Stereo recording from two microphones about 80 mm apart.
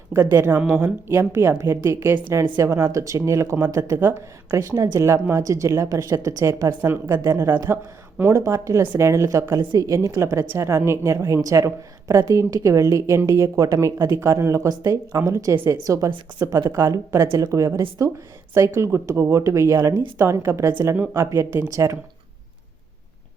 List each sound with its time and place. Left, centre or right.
0.3 s a woman's voice: right
1.0 s a woman's voice: right
6.7 s a woman's voice: right
15.5 s speech: right
15.8 s a woman's voice: right